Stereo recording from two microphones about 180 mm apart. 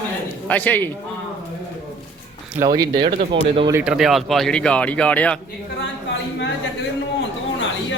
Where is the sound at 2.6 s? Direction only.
20° right (ahead or behind).